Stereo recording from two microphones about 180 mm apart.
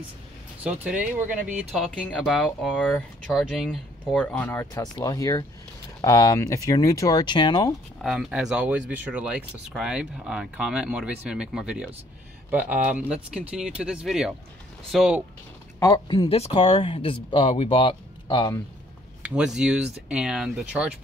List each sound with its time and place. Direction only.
2.0 s speech: 10° left (ahead or behind); by 7.7 s 25° left (ahead or behind)
8.0 s speech: centre (ahead or behind)
15.8 s speech: 20° left (ahead or behind)
19.2 s speech: 5° right (ahead or behind)